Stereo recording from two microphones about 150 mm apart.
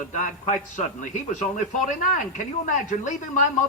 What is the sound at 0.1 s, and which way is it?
A man's voice, 55° left (ahead or behind).